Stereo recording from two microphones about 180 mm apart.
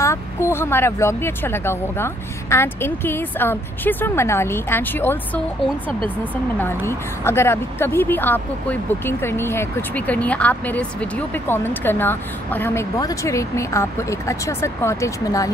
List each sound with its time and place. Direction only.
0.0 s a woman's voice: 15° left (ahead or behind)
5.9 s speech: 30° right (ahead or behind)
6.3 s a woman's voice: 10° left (ahead or behind)